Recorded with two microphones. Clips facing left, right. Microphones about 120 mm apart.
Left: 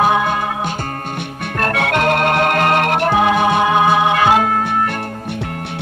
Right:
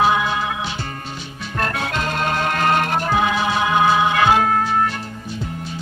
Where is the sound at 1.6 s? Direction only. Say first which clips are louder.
Left 6 dB; 65° left (ahead or behind).